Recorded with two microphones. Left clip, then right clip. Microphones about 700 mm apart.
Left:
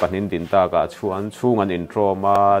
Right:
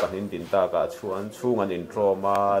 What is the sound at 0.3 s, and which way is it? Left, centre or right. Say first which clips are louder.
Speech: left 6 dB; left.